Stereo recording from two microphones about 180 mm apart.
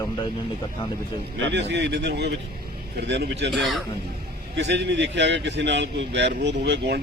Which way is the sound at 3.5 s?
Centre (ahead or behind).